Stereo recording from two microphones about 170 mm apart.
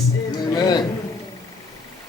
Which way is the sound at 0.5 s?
25° left (ahead or behind).